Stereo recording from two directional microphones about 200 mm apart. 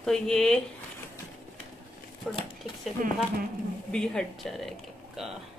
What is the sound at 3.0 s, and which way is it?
Speech, 40° right (ahead or behind).